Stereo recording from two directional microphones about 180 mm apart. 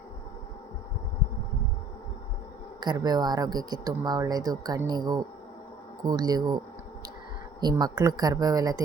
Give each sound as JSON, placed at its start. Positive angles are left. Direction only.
{"t": 2.8, "sound": "speech", "side_deg": -20}
{"t": 7.6, "sound": "speech", "side_deg": -20}